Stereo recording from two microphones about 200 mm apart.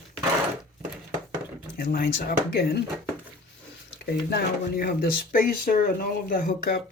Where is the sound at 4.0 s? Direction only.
50° left (ahead or behind).